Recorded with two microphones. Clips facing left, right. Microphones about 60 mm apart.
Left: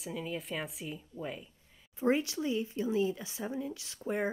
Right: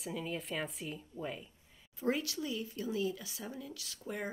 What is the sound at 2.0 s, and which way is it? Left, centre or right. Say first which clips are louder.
Speech: left 5 dB; left.